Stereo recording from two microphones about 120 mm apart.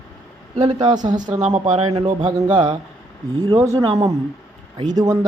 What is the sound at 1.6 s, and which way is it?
Speech, 65° right (ahead or behind).